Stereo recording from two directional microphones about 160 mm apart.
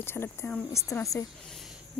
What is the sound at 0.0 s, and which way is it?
A woman's voice, 15° left (ahead or behind).